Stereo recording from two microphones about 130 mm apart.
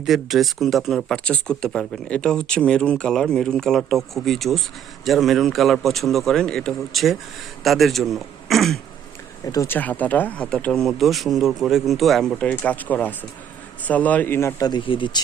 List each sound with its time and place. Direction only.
0.0 s speech: centre (ahead or behind)
9.6 s a man's voice: 15° left (ahead or behind)
14.6 s speech: 35° left (ahead or behind)